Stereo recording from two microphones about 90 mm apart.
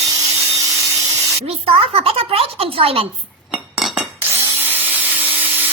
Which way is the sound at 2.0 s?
90° right.